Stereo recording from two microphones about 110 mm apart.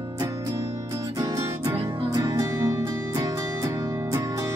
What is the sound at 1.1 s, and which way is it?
Music, 30° right (ahead or behind).